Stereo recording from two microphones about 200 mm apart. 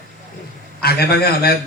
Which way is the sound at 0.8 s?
50° left (ahead or behind).